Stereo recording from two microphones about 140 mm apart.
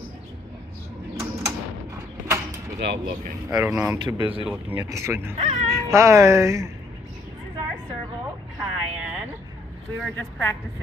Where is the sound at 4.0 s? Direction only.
35° right (ahead or behind).